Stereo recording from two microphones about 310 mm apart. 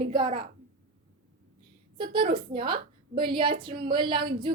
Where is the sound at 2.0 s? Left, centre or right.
Centre.